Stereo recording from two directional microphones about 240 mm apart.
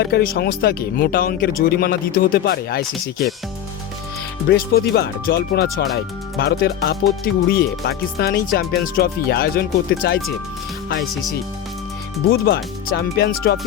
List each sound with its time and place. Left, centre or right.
0.0 s speech: left
4.4 s speech: left
12.3 s speech: left